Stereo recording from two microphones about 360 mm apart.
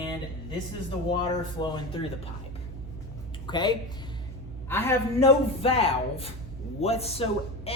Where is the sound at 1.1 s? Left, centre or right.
Centre.